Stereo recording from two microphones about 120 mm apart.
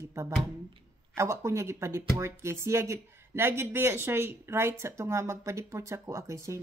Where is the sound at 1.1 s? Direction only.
25° right (ahead or behind).